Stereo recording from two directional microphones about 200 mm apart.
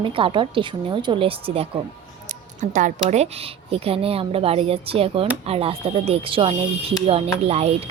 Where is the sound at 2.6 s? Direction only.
40° right (ahead or behind).